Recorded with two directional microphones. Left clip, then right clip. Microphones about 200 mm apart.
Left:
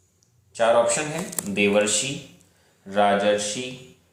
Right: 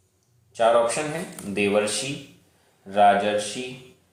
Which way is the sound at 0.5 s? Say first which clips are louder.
Even; 10° left (ahead or behind).